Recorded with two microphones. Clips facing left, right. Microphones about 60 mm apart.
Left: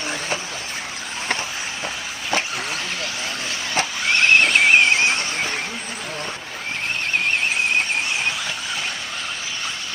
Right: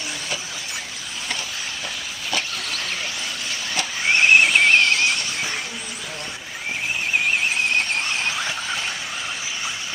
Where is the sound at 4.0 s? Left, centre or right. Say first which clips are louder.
Right 1 dB; centre.